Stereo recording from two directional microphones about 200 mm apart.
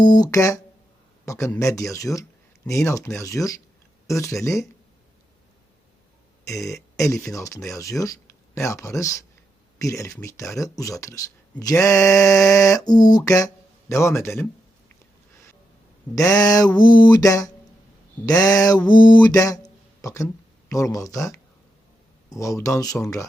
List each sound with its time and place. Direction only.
0.0 s speech: 20° left (ahead or behind)
6.5 s speech: 15° left (ahead or behind)
16.1 s speech: 20° left (ahead or behind)
16.7 s mantra: 20° left (ahead or behind)
18.3 s speech: 20° left (ahead or behind)
18.9 s mantra: 20° left (ahead or behind)
19.2 s a sound: 15° left (ahead or behind)
20.7 s speech: 15° left (ahead or behind)